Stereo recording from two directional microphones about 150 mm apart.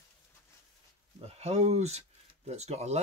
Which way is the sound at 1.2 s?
45° right (ahead or behind).